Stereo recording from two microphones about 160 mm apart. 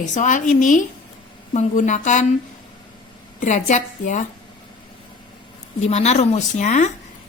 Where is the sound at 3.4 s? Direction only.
50° left (ahead or behind).